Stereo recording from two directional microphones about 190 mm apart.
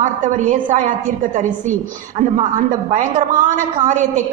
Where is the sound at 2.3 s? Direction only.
40° right (ahead or behind).